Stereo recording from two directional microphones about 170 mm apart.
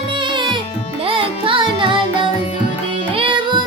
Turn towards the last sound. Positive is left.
turn(degrees=-30)  # may be behind; listen again after turning